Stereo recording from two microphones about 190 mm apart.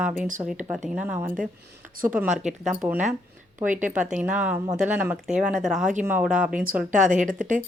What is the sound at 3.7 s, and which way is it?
Speech, 40° right (ahead or behind).